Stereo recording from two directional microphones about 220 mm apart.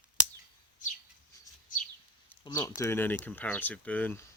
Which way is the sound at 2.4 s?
15° left (ahead or behind).